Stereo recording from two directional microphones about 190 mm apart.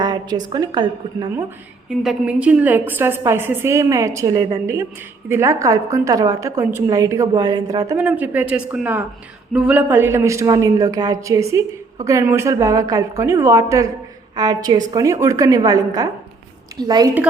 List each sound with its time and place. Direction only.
0.0 s a woman's voice: 20° right (ahead or behind)
1.9 s a woman's voice: 5° right (ahead or behind); by 17.1 s 20° right (ahead or behind)